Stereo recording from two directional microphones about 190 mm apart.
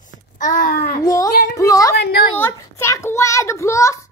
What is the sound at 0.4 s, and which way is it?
Child singing, 45° left (ahead or behind).